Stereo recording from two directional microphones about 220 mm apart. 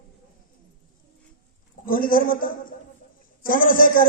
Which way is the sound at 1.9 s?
40° left (ahead or behind).